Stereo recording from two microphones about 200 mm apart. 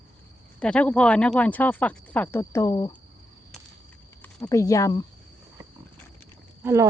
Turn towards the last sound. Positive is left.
turn(degrees=-15)  # may be behind; listen again after turning